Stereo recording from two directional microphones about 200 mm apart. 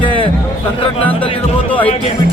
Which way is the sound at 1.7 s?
5° left (ahead or behind).